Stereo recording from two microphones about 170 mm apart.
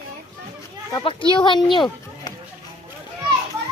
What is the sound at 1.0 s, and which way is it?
Speech, 30° left (ahead or behind).